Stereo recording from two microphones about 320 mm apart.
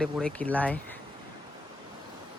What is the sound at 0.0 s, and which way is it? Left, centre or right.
Speech, centre.